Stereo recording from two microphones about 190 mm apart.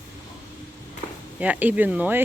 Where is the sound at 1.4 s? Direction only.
10° right (ahead or behind).